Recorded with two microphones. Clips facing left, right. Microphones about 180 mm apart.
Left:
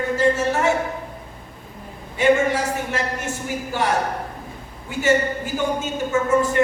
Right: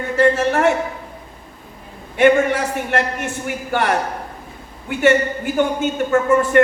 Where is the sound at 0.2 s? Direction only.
60° right (ahead or behind).